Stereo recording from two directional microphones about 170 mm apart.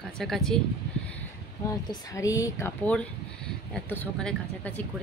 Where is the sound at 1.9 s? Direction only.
20° left (ahead or behind).